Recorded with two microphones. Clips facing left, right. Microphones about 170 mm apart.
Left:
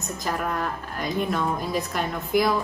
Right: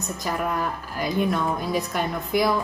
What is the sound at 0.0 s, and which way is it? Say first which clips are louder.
A woman's voice: right 1 dB; centre (ahead or behind).